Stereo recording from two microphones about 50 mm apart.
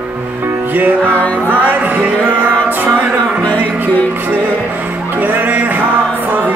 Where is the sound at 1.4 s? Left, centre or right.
Right.